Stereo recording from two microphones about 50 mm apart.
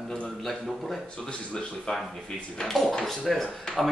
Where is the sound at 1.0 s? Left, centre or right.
Centre.